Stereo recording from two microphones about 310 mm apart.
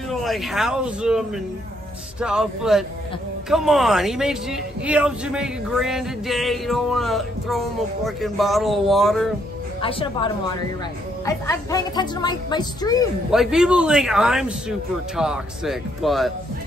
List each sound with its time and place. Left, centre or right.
0.1 s speech: centre
9.8 s a woman's voice: centre
13.3 s speech: centre